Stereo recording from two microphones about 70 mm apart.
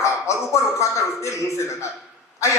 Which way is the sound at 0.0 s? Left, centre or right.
Left.